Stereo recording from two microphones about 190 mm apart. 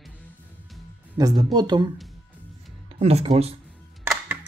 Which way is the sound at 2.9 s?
35° right (ahead or behind).